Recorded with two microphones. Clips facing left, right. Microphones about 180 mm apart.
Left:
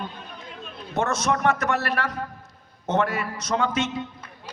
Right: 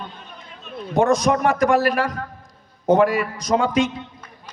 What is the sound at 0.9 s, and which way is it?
A man's voice, 15° right (ahead or behind).